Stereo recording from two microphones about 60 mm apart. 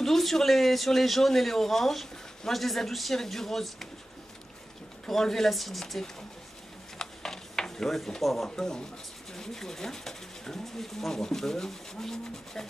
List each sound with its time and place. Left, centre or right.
0.0 s a man's voice: centre
5.0 s a man's voice: centre
7.0 s a sound: centre
8.5 s speech: centre